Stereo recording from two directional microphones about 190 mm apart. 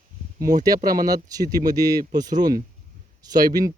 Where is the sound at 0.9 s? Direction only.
20° right (ahead or behind).